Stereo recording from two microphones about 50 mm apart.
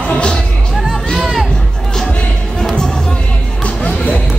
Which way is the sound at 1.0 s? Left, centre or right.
Centre.